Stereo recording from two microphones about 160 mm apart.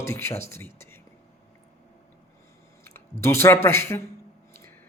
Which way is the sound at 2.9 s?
15° left (ahead or behind).